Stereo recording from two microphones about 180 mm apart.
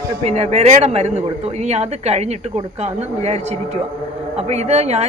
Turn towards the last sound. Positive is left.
turn(degrees=-35)  # may be behind; listen again after turning